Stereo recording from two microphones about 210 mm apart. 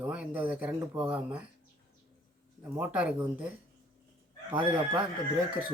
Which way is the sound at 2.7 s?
5° right (ahead or behind).